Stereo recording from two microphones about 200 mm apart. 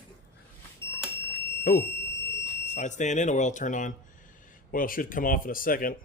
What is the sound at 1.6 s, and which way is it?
Speech, 50° left (ahead or behind).